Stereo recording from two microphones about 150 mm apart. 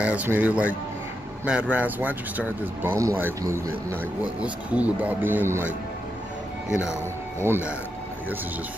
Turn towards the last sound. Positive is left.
turn(degrees=-15)  # may be behind; listen again after turning